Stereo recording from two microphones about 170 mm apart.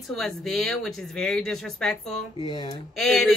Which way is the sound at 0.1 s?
Centre (ahead or behind).